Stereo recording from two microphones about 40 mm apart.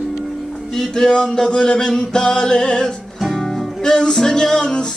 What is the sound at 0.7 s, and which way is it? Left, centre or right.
Music, centre.